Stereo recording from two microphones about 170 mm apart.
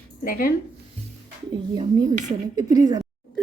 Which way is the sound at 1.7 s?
25° right (ahead or behind).